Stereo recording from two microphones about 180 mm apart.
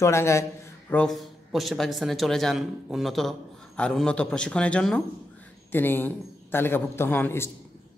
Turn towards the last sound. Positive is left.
turn(degrees=10)  # may be behind; listen again after turning